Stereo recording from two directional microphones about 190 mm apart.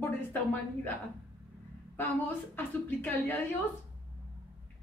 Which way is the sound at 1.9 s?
10° left (ahead or behind).